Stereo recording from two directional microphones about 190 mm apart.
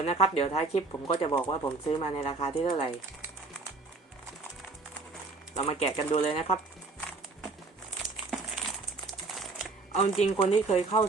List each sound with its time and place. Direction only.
0.0 s speech: 30° left (ahead or behind)
5.5 s speech: 30° left (ahead or behind)
8.1 s crumpling: centre (ahead or behind)
9.0 s typing: centre (ahead or behind)
9.9 s speech: 35° left (ahead or behind)